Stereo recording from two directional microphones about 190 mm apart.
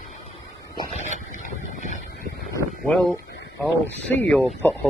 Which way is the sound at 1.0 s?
40° left (ahead or behind).